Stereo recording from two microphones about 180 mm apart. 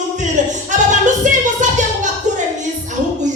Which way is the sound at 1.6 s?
40° right (ahead or behind).